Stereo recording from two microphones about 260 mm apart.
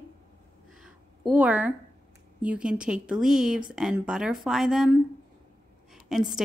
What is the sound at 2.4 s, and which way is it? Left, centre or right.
Speech, centre.